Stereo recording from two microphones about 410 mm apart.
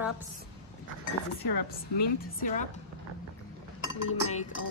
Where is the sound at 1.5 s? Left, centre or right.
Left.